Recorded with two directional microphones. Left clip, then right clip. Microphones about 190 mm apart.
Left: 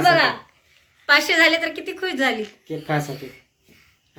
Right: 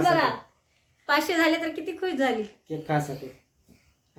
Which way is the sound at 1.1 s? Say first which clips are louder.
Left 7 dB; 35° right (ahead or behind).